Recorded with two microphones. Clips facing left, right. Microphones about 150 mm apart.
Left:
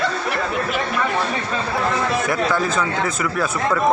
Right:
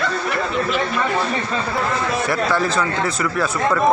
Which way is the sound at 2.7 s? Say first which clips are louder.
Right 1 dB; centre (ahead or behind).